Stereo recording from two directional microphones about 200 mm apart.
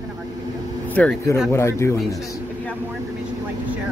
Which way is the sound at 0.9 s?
10° left (ahead or behind).